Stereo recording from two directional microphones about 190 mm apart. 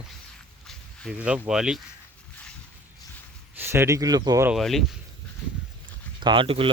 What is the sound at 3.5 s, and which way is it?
Speech, 10° right (ahead or behind).